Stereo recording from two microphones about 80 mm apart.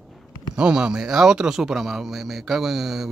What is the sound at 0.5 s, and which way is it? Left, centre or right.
Speech, centre.